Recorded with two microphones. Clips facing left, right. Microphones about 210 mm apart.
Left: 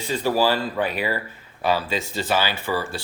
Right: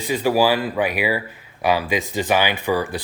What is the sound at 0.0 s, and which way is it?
Speech, 15° right (ahead or behind).